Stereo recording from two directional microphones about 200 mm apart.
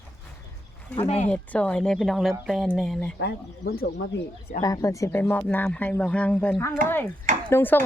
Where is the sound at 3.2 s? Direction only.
55° left (ahead or behind).